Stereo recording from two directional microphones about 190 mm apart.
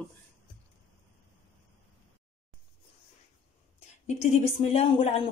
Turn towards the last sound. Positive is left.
turn(degrees=30)  # may be behind; listen again after turning